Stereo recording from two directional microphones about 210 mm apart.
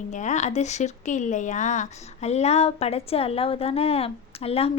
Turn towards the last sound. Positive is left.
turn(degrees=30)  # may be behind; listen again after turning